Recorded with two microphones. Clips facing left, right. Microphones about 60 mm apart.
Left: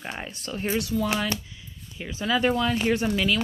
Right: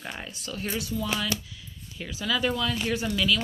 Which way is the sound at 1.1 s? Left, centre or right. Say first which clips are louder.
Left 2 dB; left.